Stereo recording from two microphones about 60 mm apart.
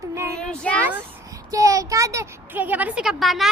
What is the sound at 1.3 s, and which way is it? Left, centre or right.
A child's voice, right.